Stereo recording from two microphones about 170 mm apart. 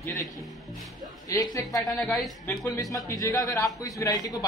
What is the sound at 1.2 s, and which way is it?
Speech, 20° left (ahead or behind).